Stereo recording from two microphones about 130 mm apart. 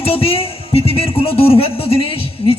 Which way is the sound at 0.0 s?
50° left (ahead or behind).